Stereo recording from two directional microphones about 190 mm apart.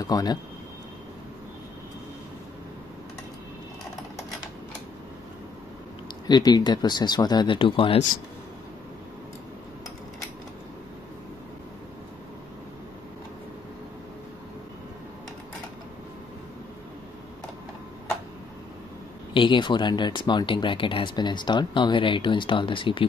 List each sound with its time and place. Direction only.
0.0 s speech: 20° left (ahead or behind)
6.2 s speech: 20° left (ahead or behind)
19.3 s speech: 25° left (ahead or behind)